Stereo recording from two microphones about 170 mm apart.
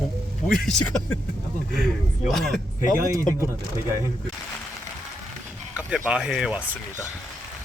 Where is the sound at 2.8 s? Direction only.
20° right (ahead or behind).